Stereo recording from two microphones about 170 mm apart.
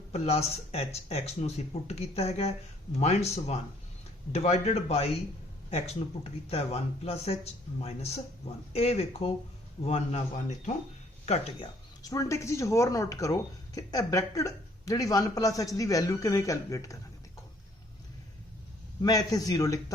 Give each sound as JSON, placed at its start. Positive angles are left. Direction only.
{"t": 0.1, "sound": "speech", "side_deg": 40}
{"t": 12.0, "sound": "speech", "side_deg": 20}
{"t": 19.0, "sound": "speech", "side_deg": 20}